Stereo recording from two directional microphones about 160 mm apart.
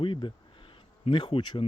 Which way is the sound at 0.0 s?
30° left (ahead or behind).